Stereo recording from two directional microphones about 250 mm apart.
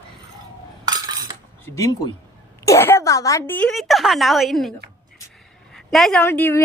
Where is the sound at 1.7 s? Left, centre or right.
Centre.